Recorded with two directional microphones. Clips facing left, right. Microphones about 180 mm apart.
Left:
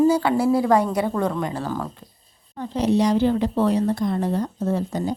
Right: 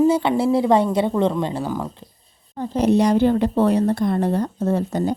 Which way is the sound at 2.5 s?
35° right (ahead or behind).